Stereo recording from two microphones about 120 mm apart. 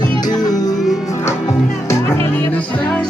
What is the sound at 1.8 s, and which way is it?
Music, 20° left (ahead or behind).